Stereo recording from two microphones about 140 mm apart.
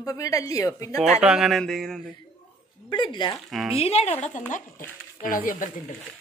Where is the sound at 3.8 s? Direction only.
50° left (ahead or behind).